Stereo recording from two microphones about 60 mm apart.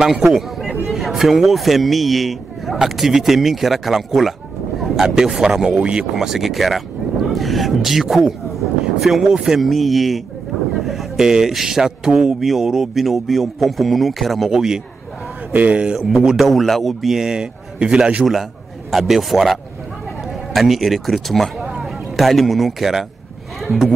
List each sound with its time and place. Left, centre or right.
0.0 s a man's voice: centre
6.1 s speech: centre
15.5 s speech: right
16.0 s a man's voice: centre
18.9 s a man's voice: centre